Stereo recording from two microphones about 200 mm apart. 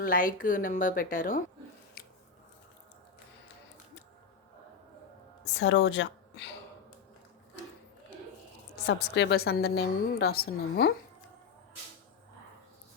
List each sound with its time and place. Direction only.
0.0 s a woman's voice: 45° left (ahead or behind)
2.0 s squish: 50° left (ahead or behind)
5.5 s speech: 60° left (ahead or behind)
8.9 s a woman's voice: 60° left (ahead or behind)